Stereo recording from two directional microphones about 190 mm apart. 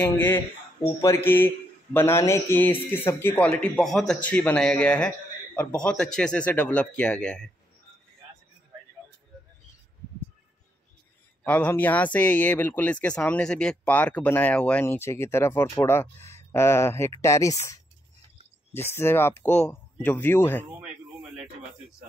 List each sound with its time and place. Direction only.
0.0 s speech: 10° left (ahead or behind)
11.4 s speech: 10° left (ahead or behind)
20.8 s a sound: 5° right (ahead or behind)